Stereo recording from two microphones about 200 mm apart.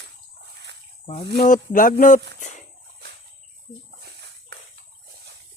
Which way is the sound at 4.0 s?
55° right (ahead or behind).